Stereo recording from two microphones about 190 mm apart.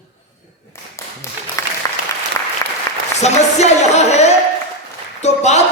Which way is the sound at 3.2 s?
35° left (ahead or behind).